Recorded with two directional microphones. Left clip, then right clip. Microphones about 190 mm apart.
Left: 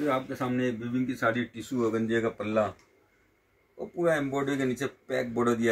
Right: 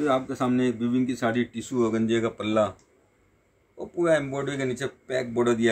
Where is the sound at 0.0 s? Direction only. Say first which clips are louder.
Right 4 dB; 55° right (ahead or behind).